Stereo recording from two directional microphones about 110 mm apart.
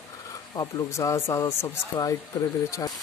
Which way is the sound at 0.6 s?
30° left (ahead or behind).